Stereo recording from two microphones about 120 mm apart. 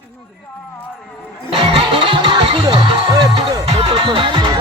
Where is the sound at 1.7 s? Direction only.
45° right (ahead or behind).